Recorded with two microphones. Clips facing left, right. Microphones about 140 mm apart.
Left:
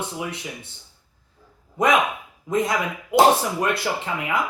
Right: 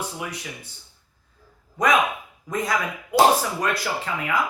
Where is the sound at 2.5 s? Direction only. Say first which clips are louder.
Left 3 dB; 25° left (ahead or behind).